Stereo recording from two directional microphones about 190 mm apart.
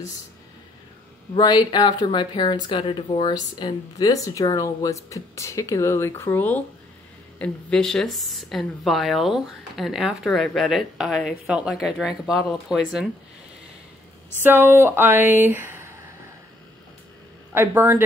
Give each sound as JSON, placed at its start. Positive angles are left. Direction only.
{"t": 1.3, "sound": "speech", "side_deg": 20}
{"t": 14.4, "sound": "speech", "side_deg": -10}
{"t": 17.6, "sound": "speech", "side_deg": -10}